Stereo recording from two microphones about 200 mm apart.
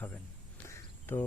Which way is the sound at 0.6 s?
10° left (ahead or behind).